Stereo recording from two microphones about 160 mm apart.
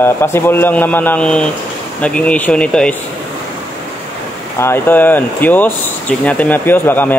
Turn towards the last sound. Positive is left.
turn(degrees=10)  # may be behind; listen again after turning